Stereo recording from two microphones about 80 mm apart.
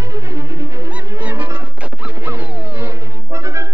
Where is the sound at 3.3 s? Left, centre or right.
Right.